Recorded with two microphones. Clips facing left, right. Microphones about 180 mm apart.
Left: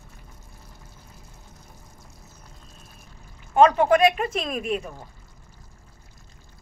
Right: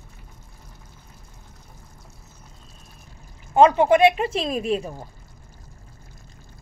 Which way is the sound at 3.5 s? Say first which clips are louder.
Right 2 dB; 25° right (ahead or behind).